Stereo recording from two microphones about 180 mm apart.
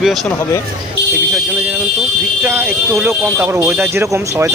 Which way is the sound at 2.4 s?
10° right (ahead or behind).